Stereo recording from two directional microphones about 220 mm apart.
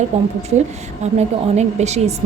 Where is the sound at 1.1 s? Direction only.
30° right (ahead or behind).